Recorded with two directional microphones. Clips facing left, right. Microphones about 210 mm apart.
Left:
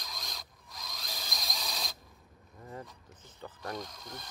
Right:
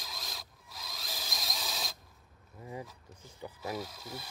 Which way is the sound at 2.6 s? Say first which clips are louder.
Right 2 dB; 10° right (ahead or behind).